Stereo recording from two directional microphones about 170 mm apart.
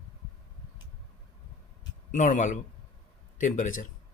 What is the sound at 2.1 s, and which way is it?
Speech, 50° left (ahead or behind).